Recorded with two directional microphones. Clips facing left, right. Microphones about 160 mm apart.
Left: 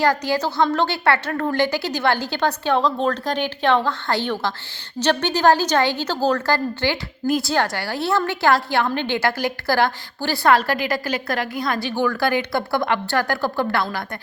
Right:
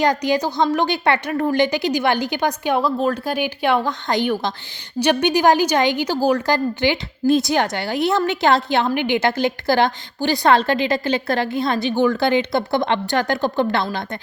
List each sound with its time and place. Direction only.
0.0 s a woman's voice: 20° right (ahead or behind)